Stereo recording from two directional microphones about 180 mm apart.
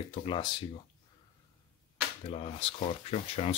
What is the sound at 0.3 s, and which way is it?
Speech, 25° left (ahead or behind).